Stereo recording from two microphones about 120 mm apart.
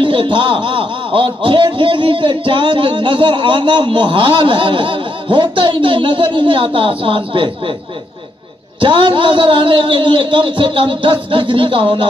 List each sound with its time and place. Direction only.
0.0 s speech: 45° right (ahead or behind)
8.8 s speech: 45° right (ahead or behind)